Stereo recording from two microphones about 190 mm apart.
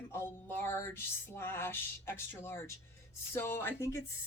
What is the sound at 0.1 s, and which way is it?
Speech, 10° left (ahead or behind).